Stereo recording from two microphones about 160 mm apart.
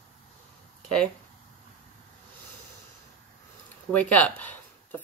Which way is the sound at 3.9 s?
10° left (ahead or behind).